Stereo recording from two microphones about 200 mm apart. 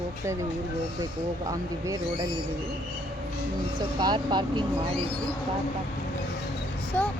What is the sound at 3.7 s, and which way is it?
Speech, 20° right (ahead or behind).